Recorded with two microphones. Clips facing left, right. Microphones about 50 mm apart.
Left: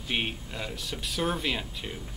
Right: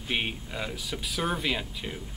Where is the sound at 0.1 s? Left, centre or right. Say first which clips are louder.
Right 1 dB; centre.